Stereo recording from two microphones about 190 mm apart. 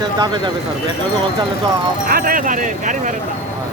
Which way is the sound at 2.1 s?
45° right (ahead or behind).